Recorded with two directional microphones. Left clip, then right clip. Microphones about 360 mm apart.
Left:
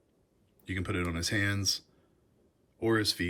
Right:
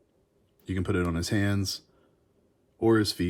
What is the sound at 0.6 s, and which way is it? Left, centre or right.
Speech, centre.